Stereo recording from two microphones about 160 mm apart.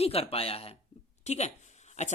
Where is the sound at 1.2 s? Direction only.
45° left (ahead or behind).